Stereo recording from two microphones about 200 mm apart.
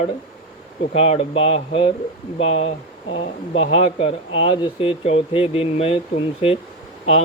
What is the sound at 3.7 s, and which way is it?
Speech, 30° left (ahead or behind).